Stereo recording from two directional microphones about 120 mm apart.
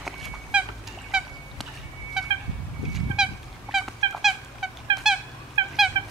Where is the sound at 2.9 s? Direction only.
5° right (ahead or behind).